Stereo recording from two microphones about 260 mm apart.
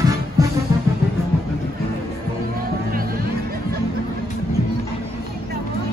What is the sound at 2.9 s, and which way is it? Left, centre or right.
Music, right.